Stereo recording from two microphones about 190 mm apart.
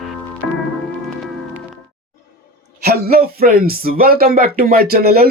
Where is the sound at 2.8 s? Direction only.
55° right (ahead or behind).